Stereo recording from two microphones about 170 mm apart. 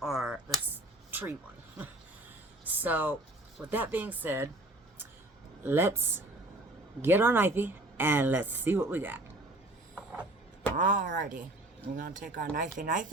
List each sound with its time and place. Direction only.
0.0 s a sound: centre (ahead or behind)
2.7 s a woman's voice: 10° right (ahead or behind)
5.6 s a woman's voice: 15° right (ahead or behind)
10.8 s speech: 50° right (ahead or behind)